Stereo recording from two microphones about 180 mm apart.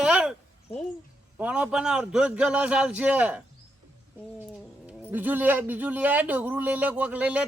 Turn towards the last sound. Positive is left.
turn(degrees=-10)  # may be behind; listen again after turning